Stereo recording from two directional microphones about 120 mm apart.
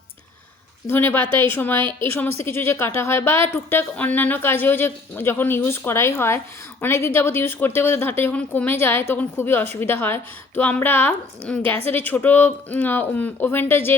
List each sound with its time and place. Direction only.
0.9 s speech: 20° left (ahead or behind)